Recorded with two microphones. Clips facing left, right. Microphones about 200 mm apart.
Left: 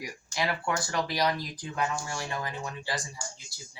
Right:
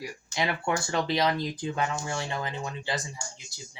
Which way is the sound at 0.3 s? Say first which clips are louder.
Right 2 dB; 25° right (ahead or behind).